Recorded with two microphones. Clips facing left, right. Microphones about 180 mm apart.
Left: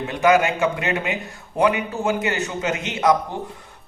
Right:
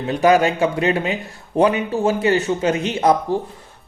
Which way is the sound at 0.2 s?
35° right (ahead or behind).